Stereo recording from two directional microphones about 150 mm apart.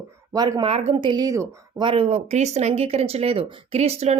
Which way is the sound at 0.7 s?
35° right (ahead or behind).